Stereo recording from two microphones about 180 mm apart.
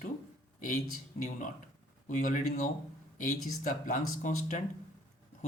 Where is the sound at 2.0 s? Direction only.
45° left (ahead or behind).